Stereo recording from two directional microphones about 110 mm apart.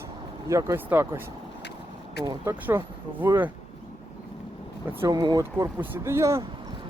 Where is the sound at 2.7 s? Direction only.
15° right (ahead or behind).